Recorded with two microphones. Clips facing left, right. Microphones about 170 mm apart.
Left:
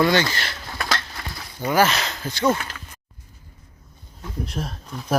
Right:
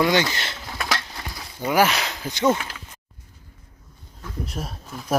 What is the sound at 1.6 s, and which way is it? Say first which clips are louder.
Speech: even; 10° right (ahead or behind).